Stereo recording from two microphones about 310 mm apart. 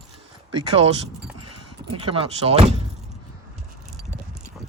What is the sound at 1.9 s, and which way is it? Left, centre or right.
Speech, centre.